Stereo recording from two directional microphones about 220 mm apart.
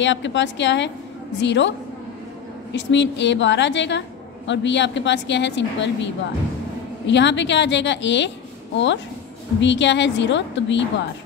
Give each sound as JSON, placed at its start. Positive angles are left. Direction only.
{"t": 0.0, "sound": "a woman's voice", "side_deg": 55}
{"t": 2.7, "sound": "a woman's voice", "side_deg": 55}
{"t": 7.1, "sound": "a woman's voice", "side_deg": 55}